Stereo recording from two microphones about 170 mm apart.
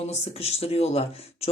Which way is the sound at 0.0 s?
40° left (ahead or behind).